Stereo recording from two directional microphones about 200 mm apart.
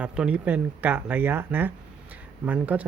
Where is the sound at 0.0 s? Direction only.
5° right (ahead or behind).